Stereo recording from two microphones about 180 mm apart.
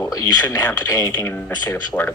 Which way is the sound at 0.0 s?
20° left (ahead or behind).